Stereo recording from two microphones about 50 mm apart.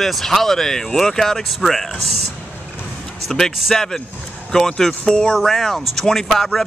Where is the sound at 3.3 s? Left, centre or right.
Centre.